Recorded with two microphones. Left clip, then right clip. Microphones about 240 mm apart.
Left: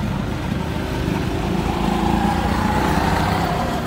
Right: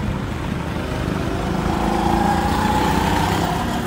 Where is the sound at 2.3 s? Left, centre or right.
Right.